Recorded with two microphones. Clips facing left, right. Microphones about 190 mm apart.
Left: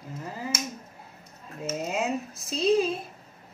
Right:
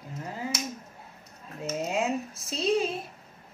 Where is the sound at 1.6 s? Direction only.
Centre (ahead or behind).